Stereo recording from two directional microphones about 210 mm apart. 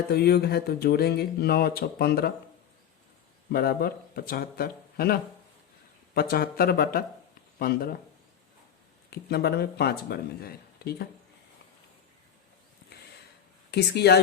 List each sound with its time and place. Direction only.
0.1 s speech: 50° left (ahead or behind)
3.5 s speech: 45° left (ahead or behind)
6.1 s speech: 45° left (ahead or behind)
9.0 s speech: 50° left (ahead or behind)
13.7 s speech: 50° left (ahead or behind)